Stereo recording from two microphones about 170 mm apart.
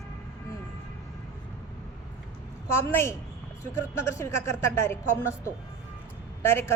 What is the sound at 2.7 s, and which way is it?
A woman's voice, 15° left (ahead or behind).